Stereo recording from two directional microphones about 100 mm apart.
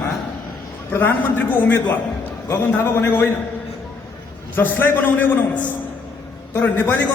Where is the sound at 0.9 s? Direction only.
20° left (ahead or behind).